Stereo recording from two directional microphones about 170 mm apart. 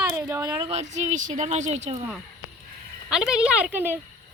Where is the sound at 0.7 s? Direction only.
45° right (ahead or behind).